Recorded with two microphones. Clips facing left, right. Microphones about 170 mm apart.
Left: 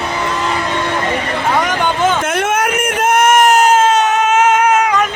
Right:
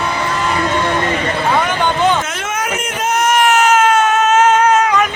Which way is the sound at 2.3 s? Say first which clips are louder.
Left 6 dB; 60° left (ahead or behind).